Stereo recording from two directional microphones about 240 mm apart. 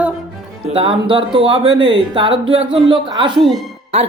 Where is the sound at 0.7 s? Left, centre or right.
Right.